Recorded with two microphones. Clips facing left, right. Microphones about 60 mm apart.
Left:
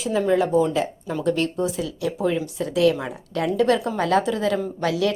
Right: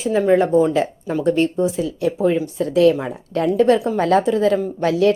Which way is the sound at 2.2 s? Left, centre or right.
Right.